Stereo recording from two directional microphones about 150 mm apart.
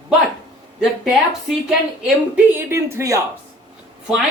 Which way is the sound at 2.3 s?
15° right (ahead or behind).